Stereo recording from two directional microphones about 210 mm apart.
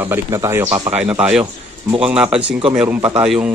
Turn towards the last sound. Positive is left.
turn(degrees=-5)  # may be behind; listen again after turning